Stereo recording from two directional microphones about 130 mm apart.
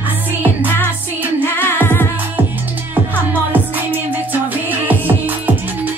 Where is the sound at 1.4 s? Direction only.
15° left (ahead or behind).